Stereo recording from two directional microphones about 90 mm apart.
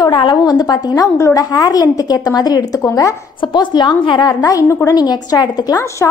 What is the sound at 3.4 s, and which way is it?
A woman's voice, 60° left (ahead or behind).